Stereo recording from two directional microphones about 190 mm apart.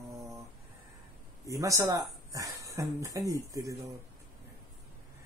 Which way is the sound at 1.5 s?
15° right (ahead or behind).